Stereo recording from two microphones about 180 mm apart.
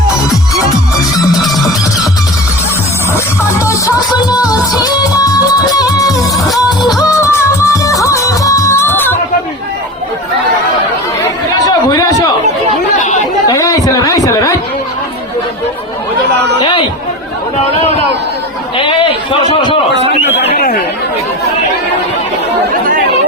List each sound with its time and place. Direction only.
1.4 s music: centre (ahead or behind)
3.6 s music: 15° left (ahead or behind)
6.3 s music: centre (ahead or behind)
7.0 s music: 15° left (ahead or behind)
11.9 s chatter: 25° left (ahead or behind)
13.0 s chatter: 40° left (ahead or behind)
13.5 s a sound: 20° left (ahead or behind)
20.6 s speech: 55° left (ahead or behind)